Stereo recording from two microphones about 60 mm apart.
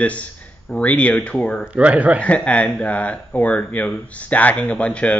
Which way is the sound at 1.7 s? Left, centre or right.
Right.